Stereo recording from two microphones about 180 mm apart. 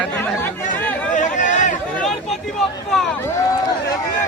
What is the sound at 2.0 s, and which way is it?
Speech, centre (ahead or behind).